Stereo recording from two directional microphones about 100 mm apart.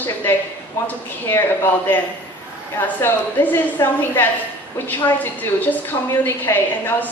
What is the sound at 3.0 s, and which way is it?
A woman's voice, 20° left (ahead or behind).